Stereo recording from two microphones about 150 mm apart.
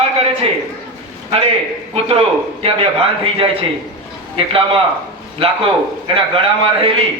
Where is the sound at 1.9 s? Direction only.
40° right (ahead or behind).